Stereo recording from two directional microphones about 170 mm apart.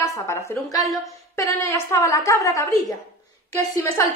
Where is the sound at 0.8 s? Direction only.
Centre (ahead or behind).